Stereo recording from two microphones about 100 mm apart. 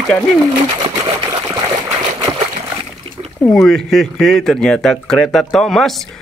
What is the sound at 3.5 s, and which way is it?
Speech, 5° left (ahead or behind).